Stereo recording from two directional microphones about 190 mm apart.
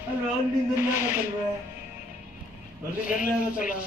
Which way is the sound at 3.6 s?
45° left (ahead or behind).